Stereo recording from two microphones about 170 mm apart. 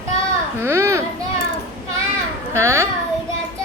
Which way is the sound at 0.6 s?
15° right (ahead or behind).